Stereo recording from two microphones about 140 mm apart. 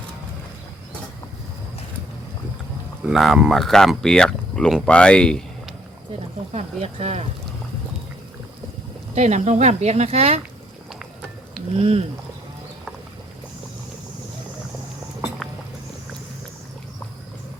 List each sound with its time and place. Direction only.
3.0 s speech: centre (ahead or behind)
6.5 s speech: 50° right (ahead or behind)
9.1 s speech: 55° right (ahead or behind)
11.0 s music: 5° right (ahead or behind)
11.7 s speech: 45° right (ahead or behind)